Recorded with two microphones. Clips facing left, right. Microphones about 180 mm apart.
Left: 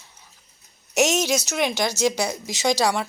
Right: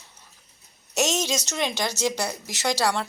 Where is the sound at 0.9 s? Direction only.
10° left (ahead or behind).